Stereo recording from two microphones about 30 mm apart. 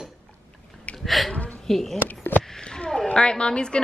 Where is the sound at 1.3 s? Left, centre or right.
Left.